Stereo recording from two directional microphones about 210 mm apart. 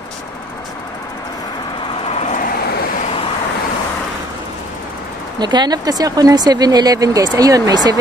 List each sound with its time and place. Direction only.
2.0 s vehicle: 30° left (ahead or behind)
5.4 s speech: 20° right (ahead or behind)